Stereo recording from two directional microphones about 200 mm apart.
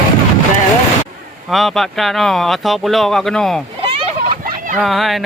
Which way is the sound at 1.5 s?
Centre (ahead or behind).